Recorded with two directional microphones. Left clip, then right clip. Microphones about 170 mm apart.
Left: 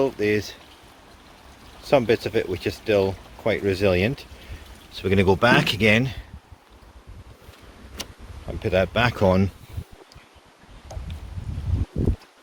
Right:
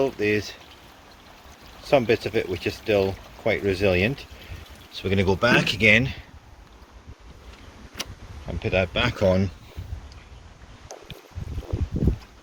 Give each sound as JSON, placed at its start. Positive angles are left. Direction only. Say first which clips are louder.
{"t": 0.0, "sound": "speech", "louder": "left 1 dB", "side_deg": 10}
{"t": 1.8, "sound": "speech", "louder": "left 1 dB", "side_deg": 10}
{"t": 4.9, "sound": "speech", "louder": "left 3 dB", "side_deg": 40}
{"t": 8.4, "sound": "speech", "louder": "left 2 dB", "side_deg": 20}